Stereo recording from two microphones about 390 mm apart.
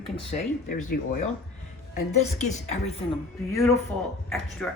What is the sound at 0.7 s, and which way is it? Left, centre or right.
A woman's voice, left.